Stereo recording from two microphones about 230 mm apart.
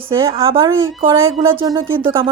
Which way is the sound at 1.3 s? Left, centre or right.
Right.